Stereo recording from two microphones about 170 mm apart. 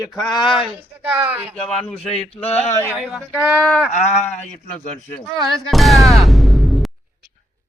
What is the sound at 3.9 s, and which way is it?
Speech, 40° left (ahead or behind).